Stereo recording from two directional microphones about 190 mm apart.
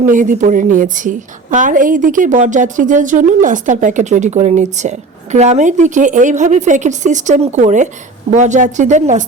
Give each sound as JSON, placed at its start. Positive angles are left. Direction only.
{"t": 0.0, "sound": "a woman's voice", "side_deg": -45}